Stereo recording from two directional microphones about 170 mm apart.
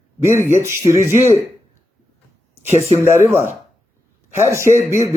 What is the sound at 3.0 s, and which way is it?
A man's voice, 15° right (ahead or behind).